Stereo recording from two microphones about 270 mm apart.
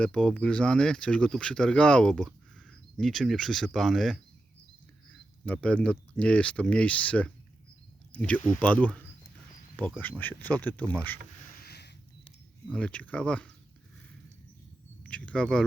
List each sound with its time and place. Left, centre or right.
0.0 s speech: centre
5.5 s speech: centre
11.6 s a sound: left
12.7 s speech: centre
15.0 s speech: centre